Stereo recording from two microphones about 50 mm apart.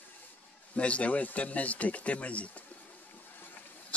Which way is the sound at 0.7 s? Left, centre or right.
Left.